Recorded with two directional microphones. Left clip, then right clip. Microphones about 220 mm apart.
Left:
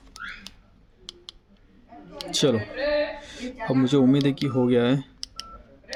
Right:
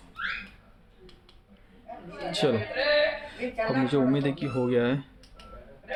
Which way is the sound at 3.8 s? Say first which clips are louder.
Left 5 dB; 30° left (ahead or behind).